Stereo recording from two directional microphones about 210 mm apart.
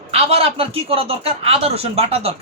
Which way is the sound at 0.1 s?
30° right (ahead or behind).